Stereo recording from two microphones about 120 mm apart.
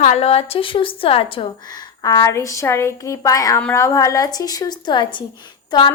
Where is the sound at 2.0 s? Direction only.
30° left (ahead or behind).